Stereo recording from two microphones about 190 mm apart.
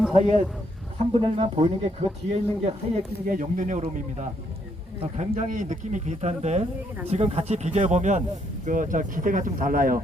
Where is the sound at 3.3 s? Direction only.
40° right (ahead or behind).